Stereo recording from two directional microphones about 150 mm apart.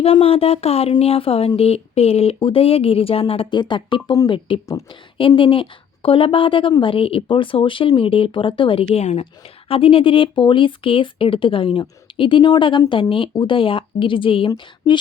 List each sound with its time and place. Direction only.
0.0 s speech: 40° left (ahead or behind)